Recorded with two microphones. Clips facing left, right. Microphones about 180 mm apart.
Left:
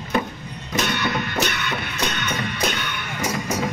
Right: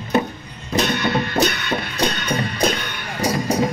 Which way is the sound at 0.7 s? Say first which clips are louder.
Right 4 dB; 35° right (ahead or behind).